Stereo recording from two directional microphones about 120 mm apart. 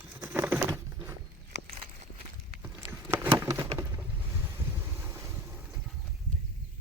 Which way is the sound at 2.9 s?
25° right (ahead or behind).